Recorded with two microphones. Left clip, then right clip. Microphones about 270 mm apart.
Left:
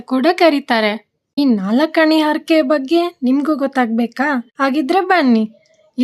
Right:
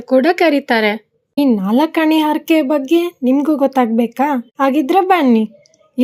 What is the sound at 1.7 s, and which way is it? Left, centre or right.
A woman's voice, centre.